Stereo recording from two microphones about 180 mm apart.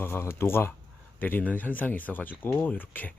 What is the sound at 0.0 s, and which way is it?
Speech, 15° left (ahead or behind).